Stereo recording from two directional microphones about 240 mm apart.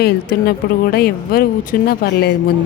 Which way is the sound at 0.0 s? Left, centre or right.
Left.